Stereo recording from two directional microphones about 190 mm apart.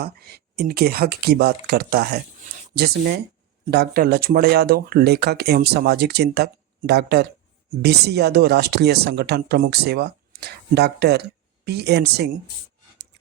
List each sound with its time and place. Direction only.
0.0 s speech: 55° right (ahead or behind)